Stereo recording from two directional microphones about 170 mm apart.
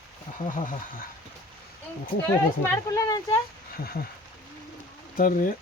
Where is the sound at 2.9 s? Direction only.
20° left (ahead or behind).